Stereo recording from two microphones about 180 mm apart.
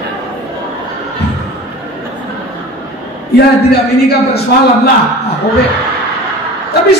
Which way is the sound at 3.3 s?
65° left (ahead or behind).